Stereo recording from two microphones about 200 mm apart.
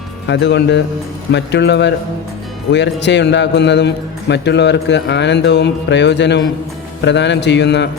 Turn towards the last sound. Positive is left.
turn(degrees=60)  # may be behind; listen again after turning